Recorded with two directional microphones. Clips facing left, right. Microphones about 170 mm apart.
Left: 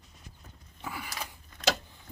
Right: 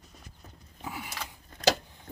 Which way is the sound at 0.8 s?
20° right (ahead or behind).